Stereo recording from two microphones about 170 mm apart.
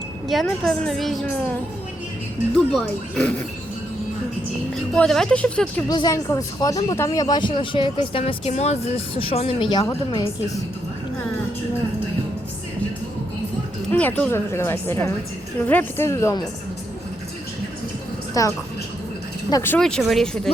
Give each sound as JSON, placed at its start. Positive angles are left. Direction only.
{"t": 0.3, "sound": "a woman's voice", "side_deg": 0}
{"t": 2.7, "sound": "a woman's voice", "side_deg": 5}
{"t": 4.7, "sound": "a woman's voice", "side_deg": 5}
{"t": 5.9, "sound": "speech", "side_deg": 20}
{"t": 13.9, "sound": "a woman's voice", "side_deg": 10}
{"t": 18.4, "sound": "a woman's voice", "side_deg": 20}